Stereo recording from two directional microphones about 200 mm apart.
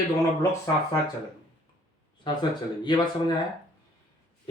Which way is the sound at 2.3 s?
25° left (ahead or behind).